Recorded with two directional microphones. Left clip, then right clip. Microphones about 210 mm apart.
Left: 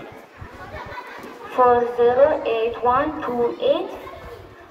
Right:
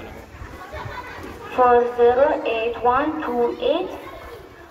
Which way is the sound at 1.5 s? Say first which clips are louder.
Right 1 dB; 25° left (ahead or behind).